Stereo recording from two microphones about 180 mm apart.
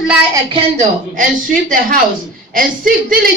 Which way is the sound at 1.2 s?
50° right (ahead or behind).